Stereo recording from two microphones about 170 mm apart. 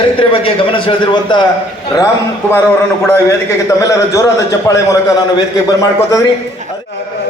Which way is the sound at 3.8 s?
20° left (ahead or behind).